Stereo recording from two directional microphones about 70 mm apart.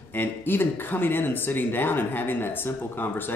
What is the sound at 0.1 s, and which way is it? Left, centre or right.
Speech, left.